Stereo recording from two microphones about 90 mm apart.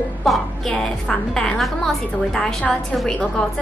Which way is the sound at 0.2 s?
5° left (ahead or behind).